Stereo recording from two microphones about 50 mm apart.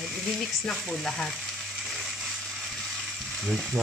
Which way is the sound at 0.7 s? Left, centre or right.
Centre.